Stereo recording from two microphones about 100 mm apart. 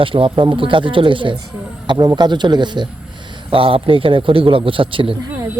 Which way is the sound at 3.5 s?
65° right (ahead or behind).